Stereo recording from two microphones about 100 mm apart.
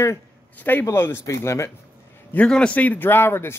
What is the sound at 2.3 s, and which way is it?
A man's voice, 10° left (ahead or behind).